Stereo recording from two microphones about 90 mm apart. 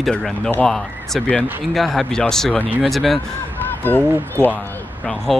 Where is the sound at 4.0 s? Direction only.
25° right (ahead or behind).